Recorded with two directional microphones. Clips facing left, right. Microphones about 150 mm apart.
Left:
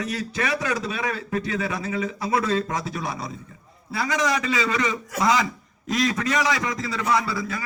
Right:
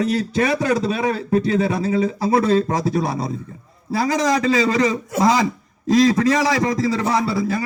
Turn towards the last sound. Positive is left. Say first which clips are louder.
# right 5 dB
turn(degrees=-30)  # may be behind; listen again after turning